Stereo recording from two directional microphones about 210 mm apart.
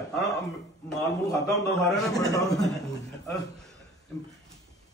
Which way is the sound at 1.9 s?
15° left (ahead or behind).